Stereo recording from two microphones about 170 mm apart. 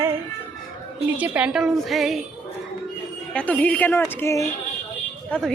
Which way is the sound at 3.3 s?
10° left (ahead or behind).